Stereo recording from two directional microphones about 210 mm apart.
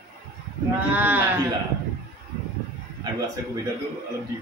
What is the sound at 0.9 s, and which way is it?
Speech, 10° right (ahead or behind).